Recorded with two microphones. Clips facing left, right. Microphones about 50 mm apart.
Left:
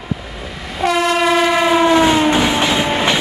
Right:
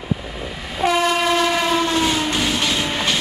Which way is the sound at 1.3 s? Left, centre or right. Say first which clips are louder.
Left 5 dB; centre.